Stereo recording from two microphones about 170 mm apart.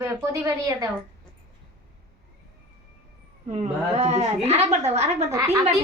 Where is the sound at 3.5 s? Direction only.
40° right (ahead or behind).